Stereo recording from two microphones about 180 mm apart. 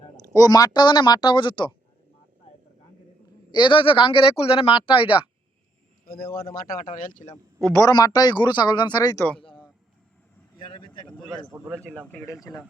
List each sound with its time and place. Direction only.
0.3 s speech: 20° left (ahead or behind)
3.5 s speech: 25° left (ahead or behind)
6.7 s speech: 50° left (ahead or behind)
7.6 s speech: 15° left (ahead or behind)
9.4 s a sound: 30° left (ahead or behind)
10.7 s speech: 25° left (ahead or behind)
11.7 s speech: 5° left (ahead or behind)
12.1 s speech: 15° left (ahead or behind)